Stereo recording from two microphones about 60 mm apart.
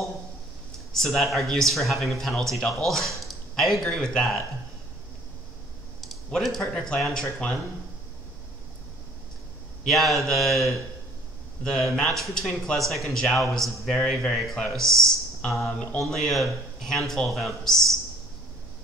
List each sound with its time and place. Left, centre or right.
0.7 s a man's voice: centre
5.9 s speech: centre
9.8 s a man's voice: centre
15.7 s mantra: centre
16.0 s a man's voice: centre